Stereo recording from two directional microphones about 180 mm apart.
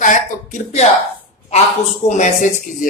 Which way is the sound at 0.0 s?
45° left (ahead or behind).